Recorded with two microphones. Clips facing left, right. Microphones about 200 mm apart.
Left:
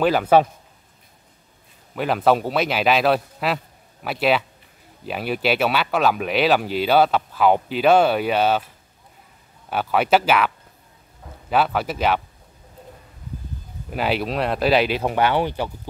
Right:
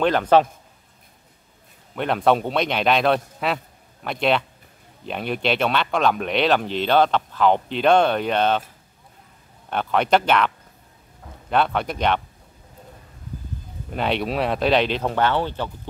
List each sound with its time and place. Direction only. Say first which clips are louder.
0.0 s speech: left 1 dB; 5° left (ahead or behind)
2.0 s a man's voice: left 1 dB; 5° left (ahead or behind)
9.7 s a man's voice: left 1 dB; 5° left (ahead or behind)
13.9 s a man's voice: even; 5° left (ahead or behind)